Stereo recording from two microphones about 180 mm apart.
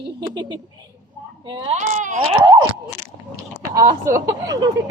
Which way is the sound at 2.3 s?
25° right (ahead or behind).